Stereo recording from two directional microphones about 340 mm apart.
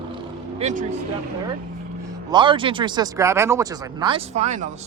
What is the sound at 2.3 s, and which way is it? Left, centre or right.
Speech, centre.